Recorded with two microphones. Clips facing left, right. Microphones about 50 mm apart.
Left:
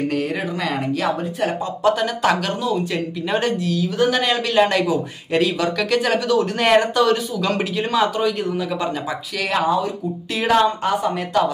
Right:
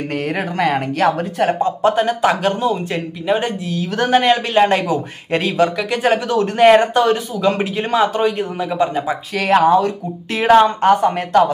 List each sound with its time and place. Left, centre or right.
0.1 s speech: right
3.3 s a man's voice: right
4.1 s a man's voice: right
9.3 s speech: right
9.6 s a woman's voice: right
10.3 s a woman's voice: right